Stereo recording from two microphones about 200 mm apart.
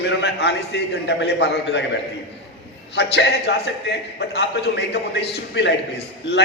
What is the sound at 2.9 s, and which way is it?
A man's voice, 60° left (ahead or behind).